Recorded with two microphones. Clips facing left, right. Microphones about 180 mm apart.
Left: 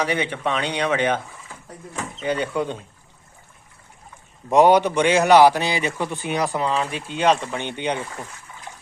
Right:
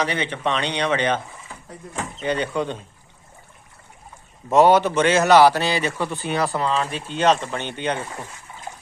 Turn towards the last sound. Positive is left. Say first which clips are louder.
# even
turn(degrees=15)  # may be behind; listen again after turning